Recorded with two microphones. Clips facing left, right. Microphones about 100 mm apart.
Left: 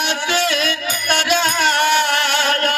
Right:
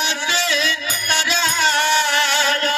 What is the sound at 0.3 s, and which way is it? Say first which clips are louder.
Music: left 3 dB; 55° left (ahead or behind).